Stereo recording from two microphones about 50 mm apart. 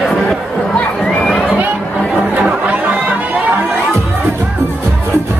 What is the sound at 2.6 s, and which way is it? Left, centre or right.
Chatter, right.